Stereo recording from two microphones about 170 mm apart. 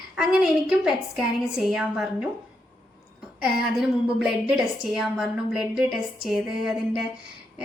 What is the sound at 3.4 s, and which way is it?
A woman's voice, 5° right (ahead or behind).